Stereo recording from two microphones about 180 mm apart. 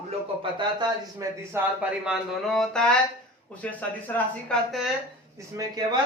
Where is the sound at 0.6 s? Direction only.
25° right (ahead or behind).